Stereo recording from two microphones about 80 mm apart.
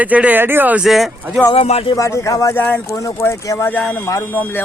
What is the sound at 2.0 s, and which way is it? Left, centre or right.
Speech, left.